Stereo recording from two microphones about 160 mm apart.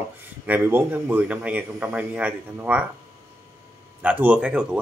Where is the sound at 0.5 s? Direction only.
10° right (ahead or behind).